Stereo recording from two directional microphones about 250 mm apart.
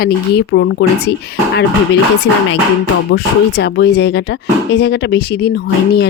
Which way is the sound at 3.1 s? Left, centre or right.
Left.